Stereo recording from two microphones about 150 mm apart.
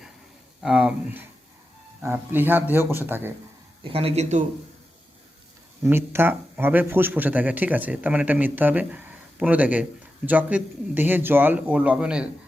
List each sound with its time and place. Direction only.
0.6 s speech: 5° right (ahead or behind)
3.8 s speech: 40° right (ahead or behind)
5.8 s speech: 15° right (ahead or behind)